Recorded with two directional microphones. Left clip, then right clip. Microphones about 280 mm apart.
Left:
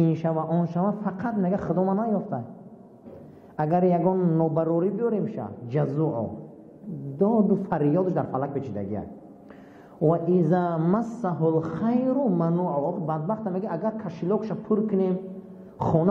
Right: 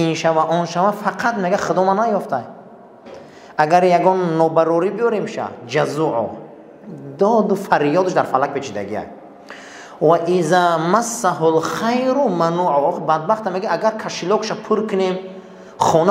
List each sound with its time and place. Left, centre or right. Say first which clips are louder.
0.0 s a woman's voice: right 10 dB; centre
3.5 s a woman's voice: right 10 dB; centre
7.2 s a woman's voice: right 8 dB; centre
7.6 s a woman's voice: right 9 dB; centre
15.8 s a sound: right 10 dB; centre